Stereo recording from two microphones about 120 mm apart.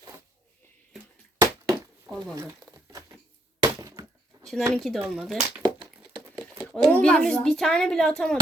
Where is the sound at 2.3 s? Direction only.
30° right (ahead or behind).